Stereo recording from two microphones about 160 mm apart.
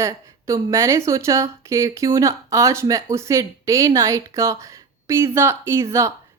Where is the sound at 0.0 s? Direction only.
20° right (ahead or behind).